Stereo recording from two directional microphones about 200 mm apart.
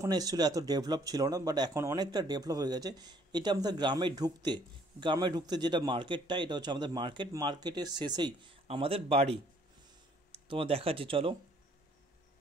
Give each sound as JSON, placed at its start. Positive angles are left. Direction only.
{"t": 0.0, "sound": "speech", "side_deg": -20}